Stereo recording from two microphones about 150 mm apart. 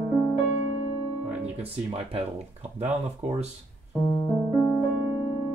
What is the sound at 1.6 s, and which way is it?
Speech, 40° right (ahead or behind).